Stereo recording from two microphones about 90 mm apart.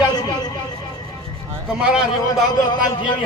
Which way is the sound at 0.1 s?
50° left (ahead or behind).